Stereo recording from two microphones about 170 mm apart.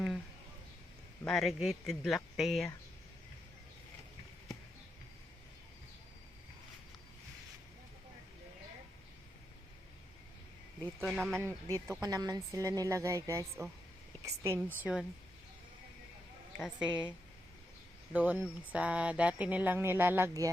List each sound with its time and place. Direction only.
1.2 s speech: centre (ahead or behind)
11.0 s speech: centre (ahead or behind)
11.3 s a woman's voice: 15° right (ahead or behind)
14.8 s speech: 5° right (ahead or behind)
16.6 s speech: 5° right (ahead or behind)
18.1 s speech: 10° right (ahead or behind)